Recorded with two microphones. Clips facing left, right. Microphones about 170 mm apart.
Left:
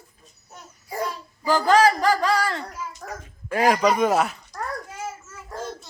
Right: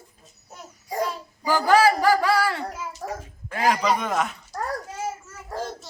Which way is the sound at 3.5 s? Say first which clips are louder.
Left 3 dB; 40° left (ahead or behind).